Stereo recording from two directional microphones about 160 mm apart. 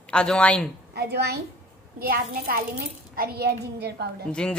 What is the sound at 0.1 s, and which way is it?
Speech, 5° left (ahead or behind).